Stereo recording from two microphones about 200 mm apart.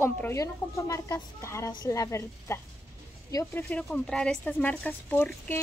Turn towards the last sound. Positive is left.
turn(degrees=10)  # may be behind; listen again after turning